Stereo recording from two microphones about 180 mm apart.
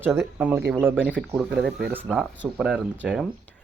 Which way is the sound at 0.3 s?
10° right (ahead or behind).